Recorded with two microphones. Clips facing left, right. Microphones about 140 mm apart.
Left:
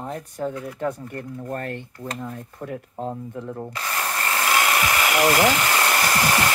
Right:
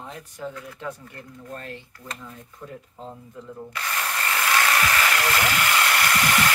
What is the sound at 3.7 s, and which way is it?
Tools, 25° left (ahead or behind).